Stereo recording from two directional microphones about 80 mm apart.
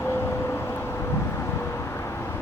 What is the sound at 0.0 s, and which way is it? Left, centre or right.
Vehicle, left.